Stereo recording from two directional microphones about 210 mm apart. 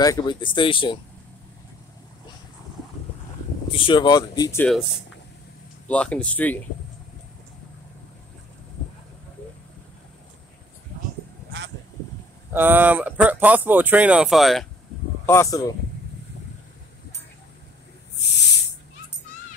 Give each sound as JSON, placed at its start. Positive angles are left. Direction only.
{"t": 0.0, "sound": "speech", "side_deg": 20}
{"t": 3.7, "sound": "speech", "side_deg": 25}
{"t": 5.9, "sound": "speech", "side_deg": 5}
{"t": 12.5, "sound": "speech", "side_deg": -10}
{"t": 15.2, "sound": "speech", "side_deg": 15}
{"t": 18.2, "sound": "hiss", "side_deg": 55}